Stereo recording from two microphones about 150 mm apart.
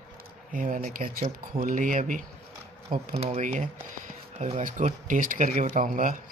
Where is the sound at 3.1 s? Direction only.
45° right (ahead or behind).